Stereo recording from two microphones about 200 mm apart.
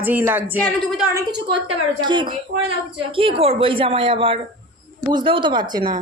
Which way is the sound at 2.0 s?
25° right (ahead or behind).